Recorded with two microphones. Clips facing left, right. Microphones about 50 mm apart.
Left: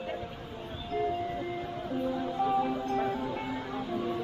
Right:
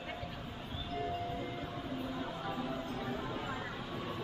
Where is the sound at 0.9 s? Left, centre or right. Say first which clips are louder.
Left 8 dB; left.